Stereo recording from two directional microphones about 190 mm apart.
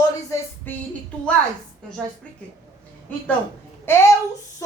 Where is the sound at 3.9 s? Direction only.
10° left (ahead or behind).